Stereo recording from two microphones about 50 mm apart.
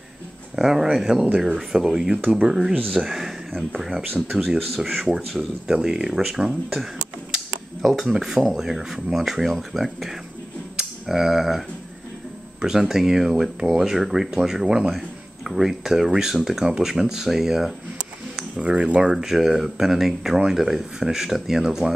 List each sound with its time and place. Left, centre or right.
0.6 s speech: centre
18.6 s speech: right
19.1 s speech: centre